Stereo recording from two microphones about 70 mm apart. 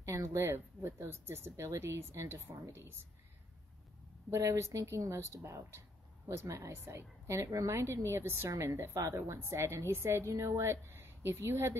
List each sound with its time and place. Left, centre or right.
0.0 s speech: right
4.3 s speech: right
8.5 s speech: right
8.7 s speech: right